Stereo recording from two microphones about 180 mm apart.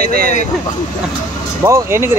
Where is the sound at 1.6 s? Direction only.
15° right (ahead or behind).